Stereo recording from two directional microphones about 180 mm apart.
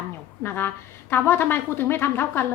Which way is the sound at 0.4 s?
10° left (ahead or behind).